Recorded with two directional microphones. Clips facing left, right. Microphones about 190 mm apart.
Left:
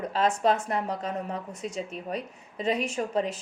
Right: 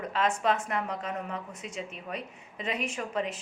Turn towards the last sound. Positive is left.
turn(degrees=35)  # may be behind; listen again after turning